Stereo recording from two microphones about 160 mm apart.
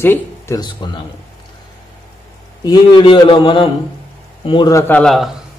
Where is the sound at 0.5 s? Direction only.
25° left (ahead or behind).